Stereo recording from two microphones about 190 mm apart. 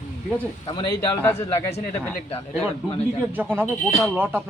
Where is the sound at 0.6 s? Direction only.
25° left (ahead or behind).